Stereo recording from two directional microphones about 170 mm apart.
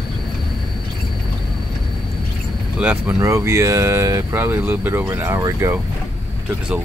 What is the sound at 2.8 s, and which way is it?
Speech, 10° right (ahead or behind).